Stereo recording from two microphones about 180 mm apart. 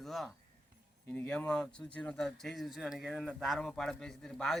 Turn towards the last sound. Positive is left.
turn(degrees=5)  # may be behind; listen again after turning